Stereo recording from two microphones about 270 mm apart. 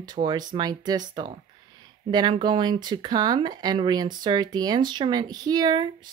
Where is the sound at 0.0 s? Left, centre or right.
Centre.